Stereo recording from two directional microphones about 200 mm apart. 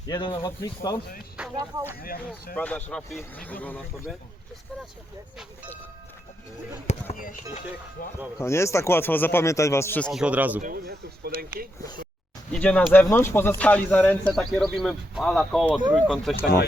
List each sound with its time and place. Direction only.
0.3 s speech: 15° left (ahead or behind)
1.5 s speech: 15° right (ahead or behind)
2.0 s speech: 45° left (ahead or behind)
2.6 s speech: 5° left (ahead or behind)
6.8 s speech: 40° left (ahead or behind)
8.4 s speech: 15° left (ahead or behind); by 10.6 s 10° right (ahead or behind)
10.6 s speech: 50° right (ahead or behind)
12.5 s speech: 5° left (ahead or behind)